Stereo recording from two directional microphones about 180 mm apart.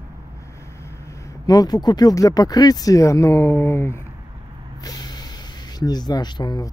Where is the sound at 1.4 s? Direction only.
20° left (ahead or behind).